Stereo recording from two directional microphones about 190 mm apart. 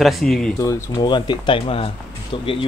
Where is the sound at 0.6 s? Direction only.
15° left (ahead or behind).